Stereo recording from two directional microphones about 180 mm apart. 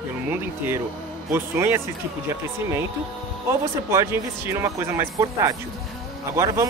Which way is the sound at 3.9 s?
15° right (ahead or behind).